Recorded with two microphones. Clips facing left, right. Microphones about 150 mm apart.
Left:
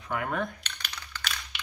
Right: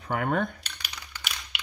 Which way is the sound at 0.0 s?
60° right (ahead or behind).